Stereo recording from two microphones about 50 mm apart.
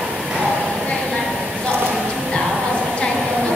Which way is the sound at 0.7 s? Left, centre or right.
Centre.